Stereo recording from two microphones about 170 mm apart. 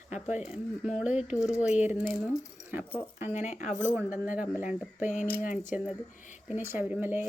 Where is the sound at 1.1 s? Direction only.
45° left (ahead or behind).